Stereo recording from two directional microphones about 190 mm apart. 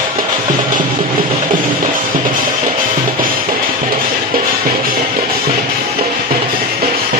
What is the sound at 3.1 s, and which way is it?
Music, 50° right (ahead or behind).